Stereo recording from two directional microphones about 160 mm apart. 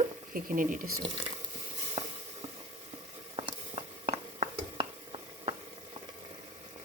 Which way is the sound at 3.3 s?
35° right (ahead or behind).